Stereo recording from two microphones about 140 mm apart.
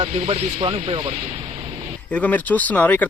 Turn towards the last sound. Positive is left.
turn(degrees=10)  # may be behind; listen again after turning